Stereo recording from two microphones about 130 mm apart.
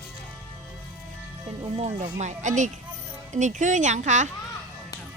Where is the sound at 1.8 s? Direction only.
60° right (ahead or behind).